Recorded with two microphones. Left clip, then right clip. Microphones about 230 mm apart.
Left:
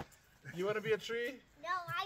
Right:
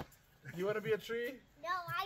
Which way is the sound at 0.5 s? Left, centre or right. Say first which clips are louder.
Left 1 dB; left.